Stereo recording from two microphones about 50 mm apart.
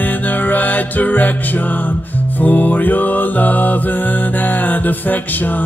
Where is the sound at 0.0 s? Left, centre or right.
Left.